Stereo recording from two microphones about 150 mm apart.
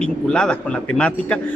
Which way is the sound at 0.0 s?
5° left (ahead or behind).